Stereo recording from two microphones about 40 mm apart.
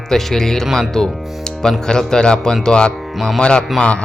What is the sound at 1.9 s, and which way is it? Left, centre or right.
Speech, centre.